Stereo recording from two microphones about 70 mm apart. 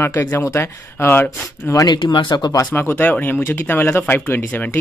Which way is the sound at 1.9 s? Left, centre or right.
Left.